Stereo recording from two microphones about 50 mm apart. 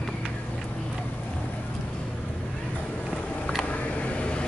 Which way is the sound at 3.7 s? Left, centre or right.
Left.